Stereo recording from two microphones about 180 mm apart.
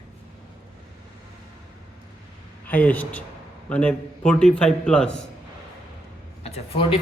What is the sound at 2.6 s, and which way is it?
A man's voice, 10° left (ahead or behind).